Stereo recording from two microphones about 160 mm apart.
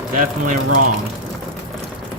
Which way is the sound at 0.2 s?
60° right (ahead or behind).